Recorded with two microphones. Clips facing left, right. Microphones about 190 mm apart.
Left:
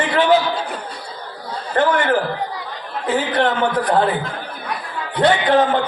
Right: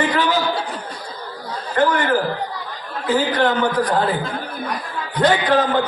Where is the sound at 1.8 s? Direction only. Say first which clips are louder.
Left 1 dB; 40° right (ahead or behind).